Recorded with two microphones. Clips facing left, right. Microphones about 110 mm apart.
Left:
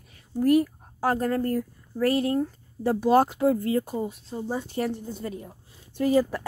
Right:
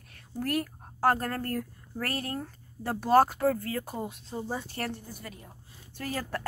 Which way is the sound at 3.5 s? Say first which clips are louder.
Left 9 dB; 20° left (ahead or behind).